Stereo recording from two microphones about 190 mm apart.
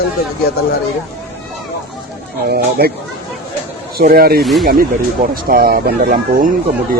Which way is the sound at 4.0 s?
50° right (ahead or behind).